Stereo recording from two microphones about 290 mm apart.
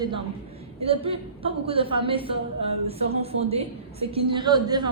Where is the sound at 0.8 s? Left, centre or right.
Centre.